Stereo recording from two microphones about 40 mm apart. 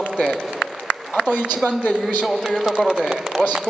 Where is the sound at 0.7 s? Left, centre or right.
Centre.